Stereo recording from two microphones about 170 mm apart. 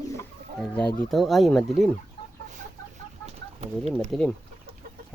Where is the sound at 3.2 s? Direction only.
40° right (ahead or behind).